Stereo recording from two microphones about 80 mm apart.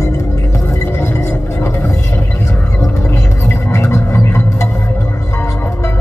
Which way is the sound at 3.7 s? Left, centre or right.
Left.